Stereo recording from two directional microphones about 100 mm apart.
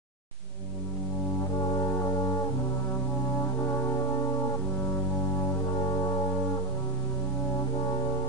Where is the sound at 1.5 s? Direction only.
40° left (ahead or behind).